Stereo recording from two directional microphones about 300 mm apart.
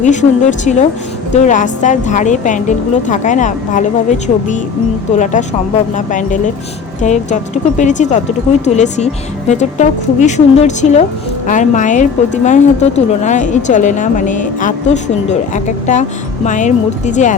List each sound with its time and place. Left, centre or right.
0.0 s a woman's voice: left